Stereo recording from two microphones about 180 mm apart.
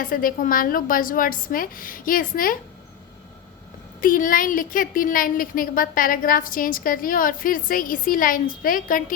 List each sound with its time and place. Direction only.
0.0 s a woman's voice: 50° left (ahead or behind)
4.0 s a woman's voice: 50° left (ahead or behind)